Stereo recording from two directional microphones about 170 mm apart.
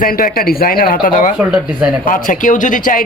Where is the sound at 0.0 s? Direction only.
60° left (ahead or behind).